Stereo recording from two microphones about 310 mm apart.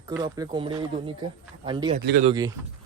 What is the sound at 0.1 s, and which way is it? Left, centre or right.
Speech, centre.